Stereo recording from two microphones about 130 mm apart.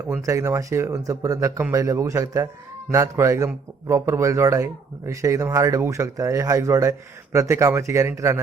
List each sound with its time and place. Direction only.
0.2 s a man's voice: 25° right (ahead or behind)